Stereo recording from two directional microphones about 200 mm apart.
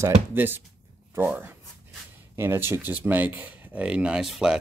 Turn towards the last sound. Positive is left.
turn(degrees=-5)  # may be behind; listen again after turning